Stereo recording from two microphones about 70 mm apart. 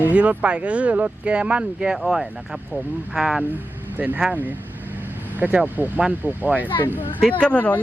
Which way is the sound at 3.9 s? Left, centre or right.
Right.